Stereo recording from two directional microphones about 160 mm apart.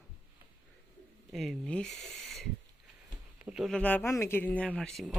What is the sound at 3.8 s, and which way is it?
A man's voice, 10° left (ahead or behind).